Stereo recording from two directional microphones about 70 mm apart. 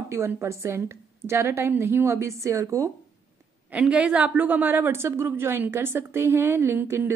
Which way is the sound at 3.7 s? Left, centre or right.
Centre.